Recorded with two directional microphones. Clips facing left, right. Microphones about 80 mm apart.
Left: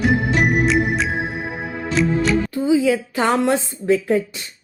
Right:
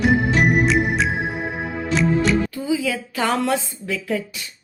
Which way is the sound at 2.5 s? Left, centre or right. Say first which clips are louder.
Left 6 dB; left.